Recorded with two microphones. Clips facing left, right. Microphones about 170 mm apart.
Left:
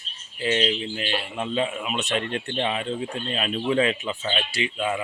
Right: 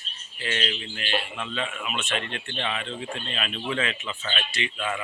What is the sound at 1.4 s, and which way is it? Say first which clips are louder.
Speech: left 6 dB; 35° left (ahead or behind).